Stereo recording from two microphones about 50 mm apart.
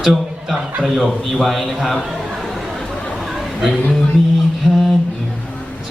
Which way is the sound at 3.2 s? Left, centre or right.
Centre.